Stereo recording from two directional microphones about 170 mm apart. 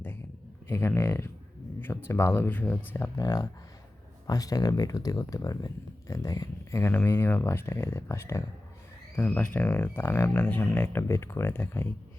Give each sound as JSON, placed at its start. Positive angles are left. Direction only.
{"t": 0.7, "sound": "speech", "side_deg": 15}
{"t": 3.2, "sound": "speech", "side_deg": 20}